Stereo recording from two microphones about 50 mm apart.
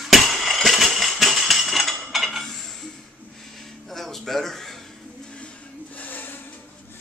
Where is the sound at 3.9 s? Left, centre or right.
Centre.